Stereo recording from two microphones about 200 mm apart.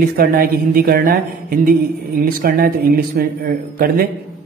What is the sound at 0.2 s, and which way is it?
A man's voice, 50° right (ahead or behind).